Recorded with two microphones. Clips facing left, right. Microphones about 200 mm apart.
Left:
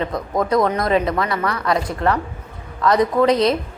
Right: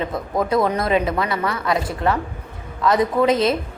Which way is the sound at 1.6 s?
5° right (ahead or behind).